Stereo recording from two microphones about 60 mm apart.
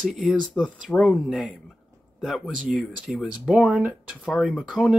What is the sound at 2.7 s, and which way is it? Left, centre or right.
Speech, right.